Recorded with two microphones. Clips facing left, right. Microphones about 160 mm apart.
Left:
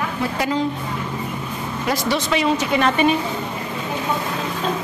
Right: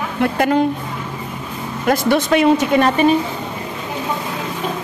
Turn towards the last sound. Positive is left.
turn(degrees=-45)  # may be behind; listen again after turning